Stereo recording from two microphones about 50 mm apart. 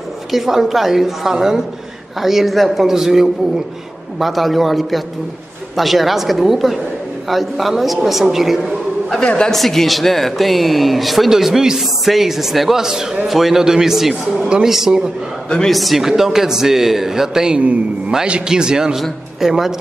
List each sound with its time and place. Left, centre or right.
0.3 s a man's voice: centre
9.2 s a woman's voice: centre
9.5 s a man's voice: centre
17.6 s a man's voice: right; by 19.7 s centre